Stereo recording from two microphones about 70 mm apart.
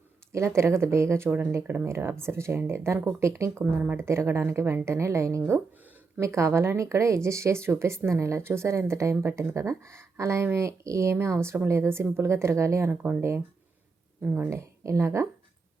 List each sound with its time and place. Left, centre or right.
0.3 s speech: right
1.3 s speech: right
12.9 s speech: right
14.5 s speech: right